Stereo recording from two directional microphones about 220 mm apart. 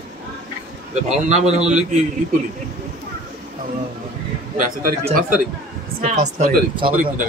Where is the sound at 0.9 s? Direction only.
30° right (ahead or behind).